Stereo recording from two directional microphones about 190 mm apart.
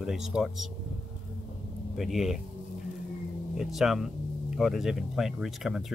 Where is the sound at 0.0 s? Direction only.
5° right (ahead or behind).